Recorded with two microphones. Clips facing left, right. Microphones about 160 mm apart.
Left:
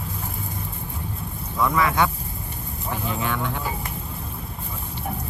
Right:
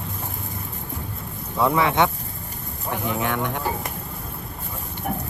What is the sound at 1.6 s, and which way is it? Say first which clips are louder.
Speech: right 2 dB; 25° right (ahead or behind).